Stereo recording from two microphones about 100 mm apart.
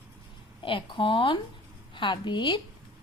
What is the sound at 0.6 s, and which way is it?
A woman's voice, 55° left (ahead or behind).